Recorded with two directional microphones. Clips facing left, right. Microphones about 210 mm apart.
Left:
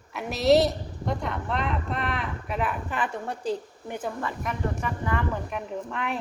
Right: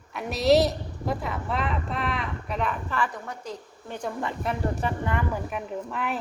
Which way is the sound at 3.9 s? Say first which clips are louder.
Left 1 dB; 5° left (ahead or behind).